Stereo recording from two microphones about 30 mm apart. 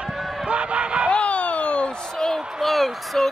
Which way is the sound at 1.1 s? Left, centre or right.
Left.